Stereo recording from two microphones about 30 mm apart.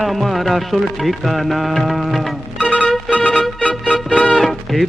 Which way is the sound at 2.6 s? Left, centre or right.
Left.